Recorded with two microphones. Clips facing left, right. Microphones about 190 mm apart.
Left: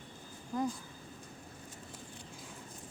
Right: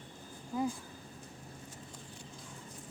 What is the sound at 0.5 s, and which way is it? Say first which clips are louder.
Speech: even; 5° right (ahead or behind).